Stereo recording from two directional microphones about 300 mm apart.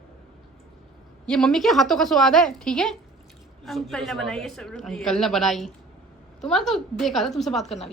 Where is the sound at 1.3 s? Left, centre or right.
Centre.